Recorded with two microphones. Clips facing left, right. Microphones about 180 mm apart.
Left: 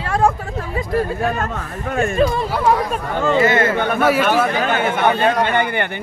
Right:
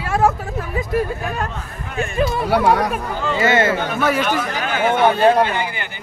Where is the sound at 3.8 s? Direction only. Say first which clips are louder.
Left 3 dB; 55° left (ahead or behind).